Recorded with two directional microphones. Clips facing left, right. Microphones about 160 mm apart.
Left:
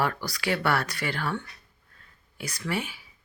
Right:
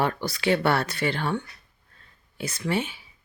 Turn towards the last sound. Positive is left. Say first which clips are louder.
# right 4 dB
turn(degrees=-25)  # may be behind; listen again after turning